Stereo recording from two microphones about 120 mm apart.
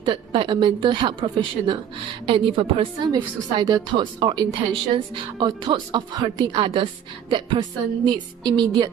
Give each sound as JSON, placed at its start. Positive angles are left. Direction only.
{"t": 0.0, "sound": "a woman's voice", "side_deg": -45}